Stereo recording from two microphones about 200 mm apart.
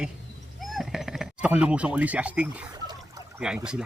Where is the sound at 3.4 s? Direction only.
5° right (ahead or behind).